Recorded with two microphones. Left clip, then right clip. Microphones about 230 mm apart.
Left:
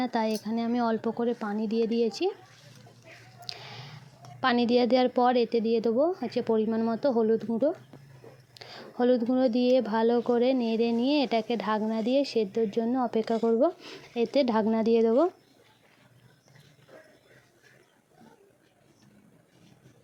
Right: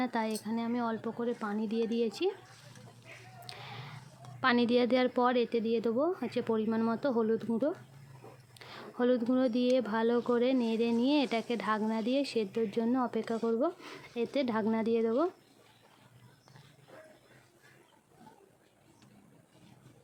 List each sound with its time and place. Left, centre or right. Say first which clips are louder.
0.0 s speech: left 5 dB; centre
3.4 s a sound: left 5 dB; centre
4.4 s speech: left 4 dB; centre
8.5 s speech: left 5 dB; centre